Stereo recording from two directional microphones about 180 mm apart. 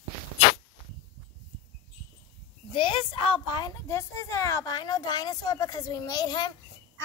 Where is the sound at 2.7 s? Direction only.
30° left (ahead or behind).